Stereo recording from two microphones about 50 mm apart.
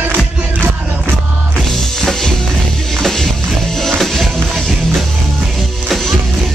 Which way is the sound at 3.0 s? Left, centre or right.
Centre.